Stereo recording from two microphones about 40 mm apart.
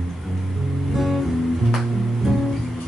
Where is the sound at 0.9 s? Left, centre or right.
Centre.